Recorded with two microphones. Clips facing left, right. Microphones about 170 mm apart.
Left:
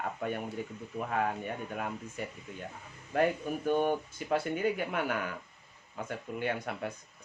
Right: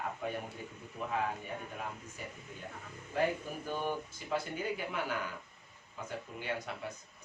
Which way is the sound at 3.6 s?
55° left (ahead or behind).